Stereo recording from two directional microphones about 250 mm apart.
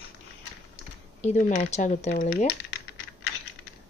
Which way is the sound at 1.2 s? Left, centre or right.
Left.